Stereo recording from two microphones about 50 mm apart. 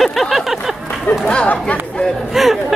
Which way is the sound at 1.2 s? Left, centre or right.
Left.